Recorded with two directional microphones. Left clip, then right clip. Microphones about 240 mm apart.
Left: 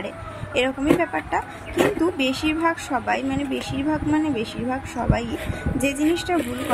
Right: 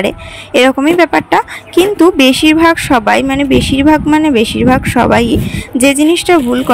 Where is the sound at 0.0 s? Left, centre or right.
Right.